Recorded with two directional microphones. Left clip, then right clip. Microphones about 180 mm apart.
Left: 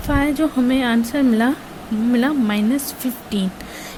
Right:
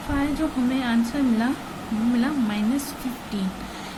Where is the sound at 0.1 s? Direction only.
50° left (ahead or behind).